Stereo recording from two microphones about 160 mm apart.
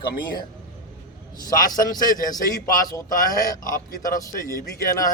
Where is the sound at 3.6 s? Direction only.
60° left (ahead or behind).